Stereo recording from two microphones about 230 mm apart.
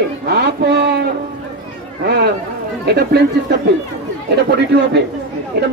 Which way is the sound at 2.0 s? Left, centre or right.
Right.